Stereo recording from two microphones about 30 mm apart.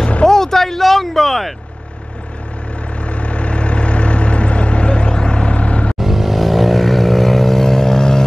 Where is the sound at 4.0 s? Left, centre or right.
Left.